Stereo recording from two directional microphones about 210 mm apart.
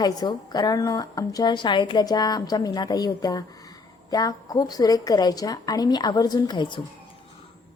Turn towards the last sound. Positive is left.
turn(degrees=20)  # may be behind; listen again after turning